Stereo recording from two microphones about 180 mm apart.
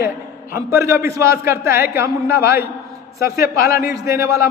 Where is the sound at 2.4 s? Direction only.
60° left (ahead or behind).